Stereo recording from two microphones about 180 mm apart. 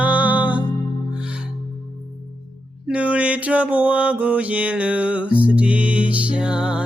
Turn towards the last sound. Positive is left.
turn(degrees=-5)  # may be behind; listen again after turning